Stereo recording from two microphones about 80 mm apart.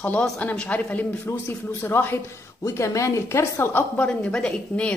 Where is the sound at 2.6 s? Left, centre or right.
Left.